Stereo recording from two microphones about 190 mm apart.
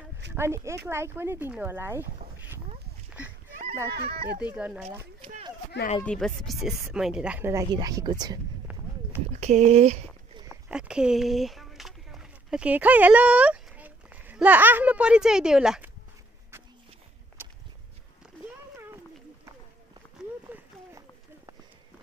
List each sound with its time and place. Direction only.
0.3 s speech: 15° right (ahead or behind)
4.4 s speech: 5° right (ahead or behind)
6.0 s speech: centre (ahead or behind); by 8.4 s 20° right (ahead or behind)
9.4 s speech: 35° right (ahead or behind)
10.3 s a sound: 20° right (ahead or behind)
10.7 s speech: 5° right (ahead or behind)
17.4 s a sound: 10° right (ahead or behind)
20.4 s run: 10° right (ahead or behind)